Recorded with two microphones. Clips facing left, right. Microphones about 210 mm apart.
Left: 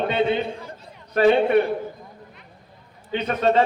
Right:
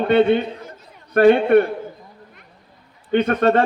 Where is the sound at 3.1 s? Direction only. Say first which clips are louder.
Right 4 dB; 60° right (ahead or behind).